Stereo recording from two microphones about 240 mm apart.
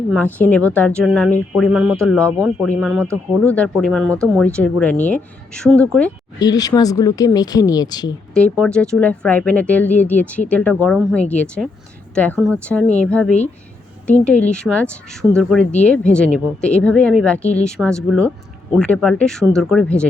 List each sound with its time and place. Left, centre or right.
0.1 s speech: centre
6.4 s speech: centre
8.3 s speech: centre